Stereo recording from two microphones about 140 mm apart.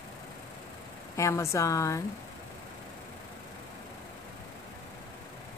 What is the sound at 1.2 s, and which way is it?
Speech, 20° left (ahead or behind).